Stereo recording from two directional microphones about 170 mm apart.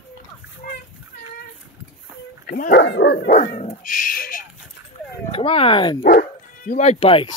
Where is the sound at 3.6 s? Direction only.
55° left (ahead or behind).